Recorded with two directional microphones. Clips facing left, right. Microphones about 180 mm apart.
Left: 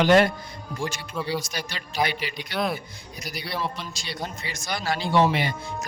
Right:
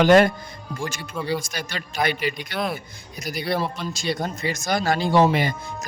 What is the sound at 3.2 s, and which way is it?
A man's voice, 50° right (ahead or behind).